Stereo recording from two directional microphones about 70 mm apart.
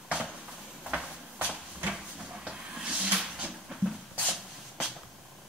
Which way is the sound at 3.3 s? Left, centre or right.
Centre.